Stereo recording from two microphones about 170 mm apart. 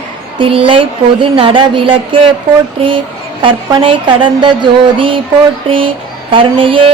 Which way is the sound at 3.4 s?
30° right (ahead or behind).